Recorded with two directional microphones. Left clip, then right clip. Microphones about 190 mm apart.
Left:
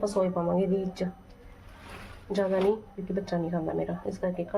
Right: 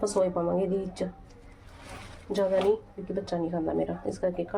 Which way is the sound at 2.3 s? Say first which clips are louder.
Right 1 dB; 5° right (ahead or behind).